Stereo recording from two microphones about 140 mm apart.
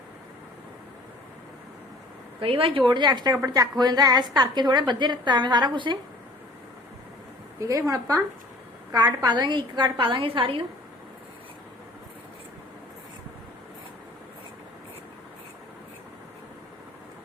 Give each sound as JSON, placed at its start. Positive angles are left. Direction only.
{"t": 2.4, "sound": "a woman's voice", "side_deg": -40}
{"t": 7.6, "sound": "a woman's voice", "side_deg": -25}
{"t": 9.2, "sound": "a woman's voice", "side_deg": -30}